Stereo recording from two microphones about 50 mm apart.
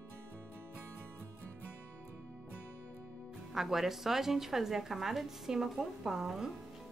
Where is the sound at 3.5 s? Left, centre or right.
Centre.